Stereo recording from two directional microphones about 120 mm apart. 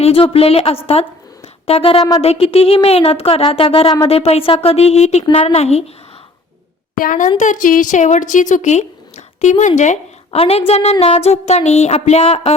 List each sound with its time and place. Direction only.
0.0 s a woman's voice: 55° left (ahead or behind)
7.3 s a woman's voice: 90° left
10.3 s a woman's voice: 55° left (ahead or behind)